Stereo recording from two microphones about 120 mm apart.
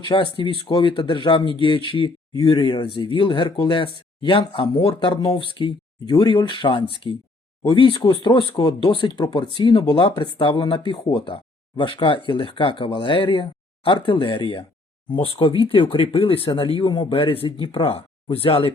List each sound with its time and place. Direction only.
0.1 s speech: 45° left (ahead or behind)